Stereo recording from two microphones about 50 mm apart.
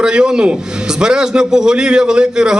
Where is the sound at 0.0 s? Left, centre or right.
Centre.